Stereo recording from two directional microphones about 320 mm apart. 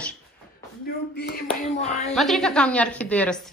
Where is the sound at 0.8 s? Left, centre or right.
Left.